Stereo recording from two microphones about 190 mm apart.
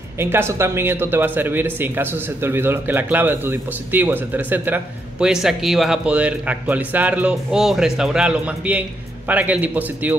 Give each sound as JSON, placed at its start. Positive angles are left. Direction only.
{"t": 0.2, "sound": "speech", "side_deg": -10}